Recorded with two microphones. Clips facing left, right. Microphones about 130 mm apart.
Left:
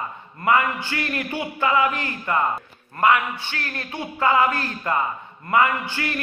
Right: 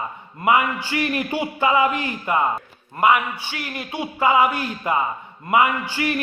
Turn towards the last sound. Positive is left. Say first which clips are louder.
# right 3 dB
turn(degrees=-15)  # may be behind; listen again after turning